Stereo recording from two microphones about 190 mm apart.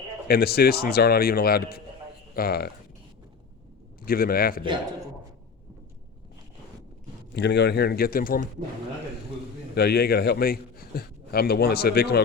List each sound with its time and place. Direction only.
0.3 s a man's voice: 55° left (ahead or behind)
4.0 s a man's voice: 50° left (ahead or behind)
4.6 s a man's voice: 25° right (ahead or behind)
7.3 s a man's voice: 65° left (ahead or behind)
9.7 s a man's voice: 55° left (ahead or behind)